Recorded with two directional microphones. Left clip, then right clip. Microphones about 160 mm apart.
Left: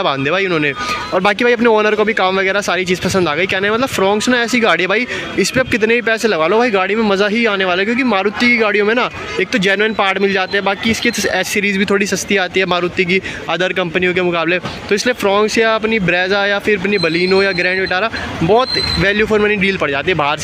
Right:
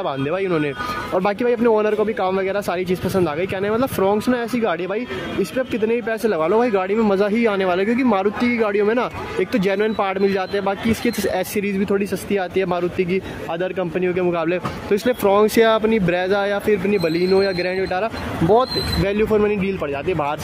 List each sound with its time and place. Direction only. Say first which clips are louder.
0.0 s speech: left 7 dB; 5° left (ahead or behind)
15.4 s speech: left 2 dB; 20° right (ahead or behind)
15.8 s speech: left 4 dB; 5° right (ahead or behind)